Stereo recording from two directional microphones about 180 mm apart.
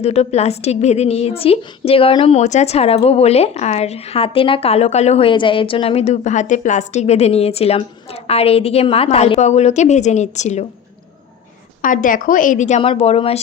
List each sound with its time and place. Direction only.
0.0 s a woman's voice: 35° left (ahead or behind)
11.8 s a woman's voice: 45° left (ahead or behind)